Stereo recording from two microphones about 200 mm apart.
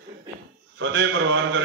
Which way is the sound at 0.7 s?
65° right (ahead or behind).